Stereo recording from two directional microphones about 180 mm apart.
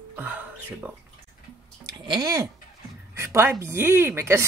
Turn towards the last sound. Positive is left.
turn(degrees=-15)  # may be behind; listen again after turning